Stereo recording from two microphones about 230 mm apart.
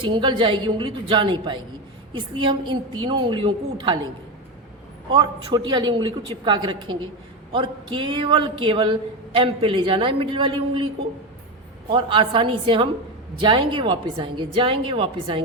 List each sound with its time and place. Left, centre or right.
0.0 s speech: right
5.1 s speech: centre